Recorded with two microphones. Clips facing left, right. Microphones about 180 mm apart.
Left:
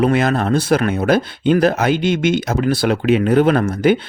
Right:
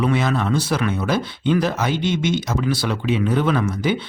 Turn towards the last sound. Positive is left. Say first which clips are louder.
# left 6 dB
turn(degrees=55)  # may be behind; listen again after turning